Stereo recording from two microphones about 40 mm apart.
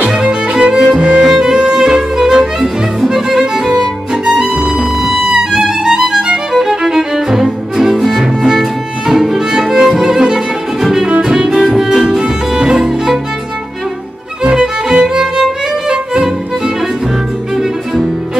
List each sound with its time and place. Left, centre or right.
0.1 s music: right
12.7 s violin: centre
14.6 s music: centre